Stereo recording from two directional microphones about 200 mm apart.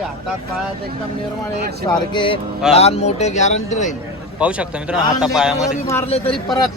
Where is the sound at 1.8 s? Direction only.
25° left (ahead or behind).